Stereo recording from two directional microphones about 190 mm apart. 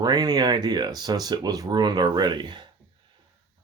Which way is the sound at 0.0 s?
20° right (ahead or behind).